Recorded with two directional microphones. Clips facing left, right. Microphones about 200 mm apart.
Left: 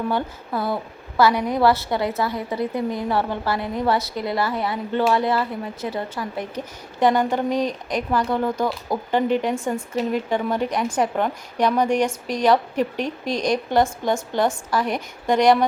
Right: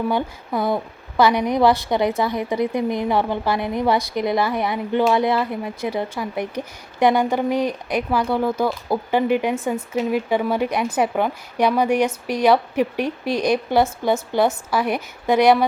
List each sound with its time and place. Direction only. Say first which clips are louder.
0.1 s a woman's voice: right 2 dB; 15° right (ahead or behind)